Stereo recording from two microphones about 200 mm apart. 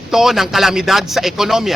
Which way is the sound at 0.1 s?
Centre (ahead or behind).